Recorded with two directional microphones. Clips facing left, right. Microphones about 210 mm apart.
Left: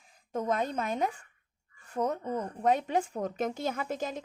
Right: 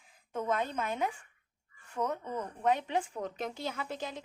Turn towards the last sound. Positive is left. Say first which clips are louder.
# left 5 dB
turn(degrees=45)  # may be behind; listen again after turning